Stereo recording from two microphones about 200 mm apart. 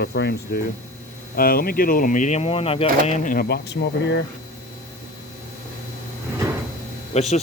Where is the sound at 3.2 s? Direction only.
50° left (ahead or behind).